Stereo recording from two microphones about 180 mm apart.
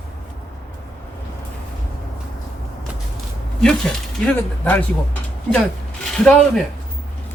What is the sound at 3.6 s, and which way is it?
Speech, 5° left (ahead or behind).